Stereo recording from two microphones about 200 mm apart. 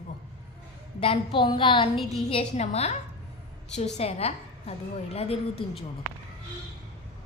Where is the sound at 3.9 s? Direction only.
30° left (ahead or behind).